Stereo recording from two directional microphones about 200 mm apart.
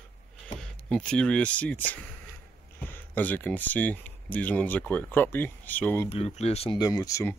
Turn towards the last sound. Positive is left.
turn(degrees=15)  # may be behind; listen again after turning